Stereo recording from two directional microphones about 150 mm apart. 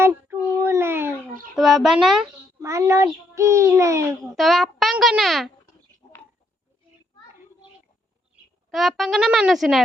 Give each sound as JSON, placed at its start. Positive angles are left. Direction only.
{"t": 0.0, "sound": "child singing", "side_deg": -15}
{"t": 1.5, "sound": "a child's voice", "side_deg": 0}
{"t": 2.6, "sound": "a child's voice", "side_deg": -20}
{"t": 4.2, "sound": "a child's voice", "side_deg": 0}
{"t": 8.7, "sound": "a child's voice", "side_deg": 0}